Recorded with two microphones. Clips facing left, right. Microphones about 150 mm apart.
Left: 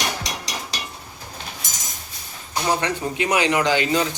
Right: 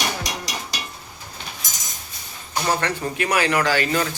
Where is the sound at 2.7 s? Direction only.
15° left (ahead or behind).